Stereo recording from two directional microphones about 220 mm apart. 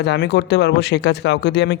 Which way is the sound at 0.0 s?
50° left (ahead or behind).